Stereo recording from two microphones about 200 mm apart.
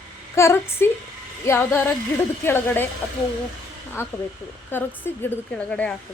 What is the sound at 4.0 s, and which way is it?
A woman's voice, 10° left (ahead or behind).